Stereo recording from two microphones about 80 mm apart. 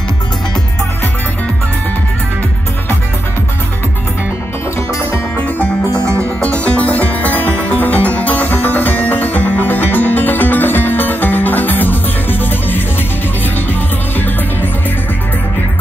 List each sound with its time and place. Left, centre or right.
6.6 s music: centre
14.1 s music: left